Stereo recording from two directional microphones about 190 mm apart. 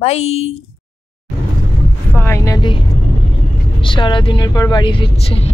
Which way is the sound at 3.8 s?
25° left (ahead or behind).